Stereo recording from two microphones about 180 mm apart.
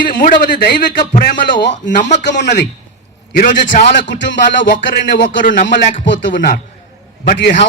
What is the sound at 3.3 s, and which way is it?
Speech, 50° left (ahead or behind).